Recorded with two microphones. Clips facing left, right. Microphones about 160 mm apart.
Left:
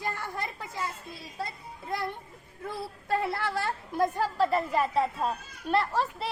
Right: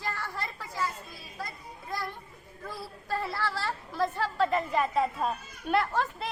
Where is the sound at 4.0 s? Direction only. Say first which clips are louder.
Left 2 dB; 10° left (ahead or behind).